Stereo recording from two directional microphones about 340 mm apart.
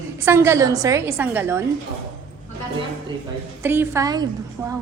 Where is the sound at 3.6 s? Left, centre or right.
Centre.